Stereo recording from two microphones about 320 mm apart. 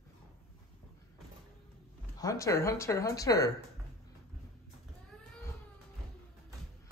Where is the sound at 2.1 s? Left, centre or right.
Centre.